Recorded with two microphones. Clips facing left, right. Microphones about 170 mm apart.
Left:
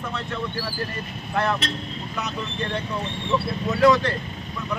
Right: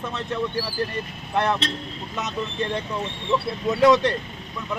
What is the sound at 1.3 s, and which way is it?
Speech, 20° right (ahead or behind).